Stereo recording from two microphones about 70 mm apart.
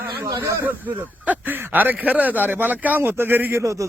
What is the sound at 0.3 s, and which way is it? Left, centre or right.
Speech, right.